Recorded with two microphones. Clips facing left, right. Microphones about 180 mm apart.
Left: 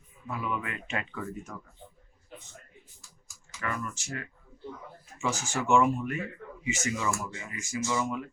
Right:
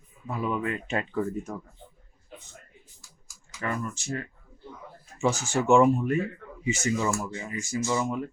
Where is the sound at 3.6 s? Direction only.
30° right (ahead or behind).